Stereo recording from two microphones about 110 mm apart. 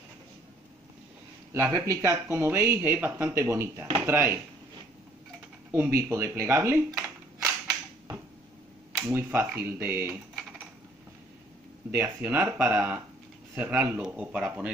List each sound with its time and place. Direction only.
1.5 s speech: 30° right (ahead or behind)
5.9 s speech: 25° right (ahead or behind)
9.0 s speech: 20° right (ahead or behind)
11.9 s speech: 15° right (ahead or behind)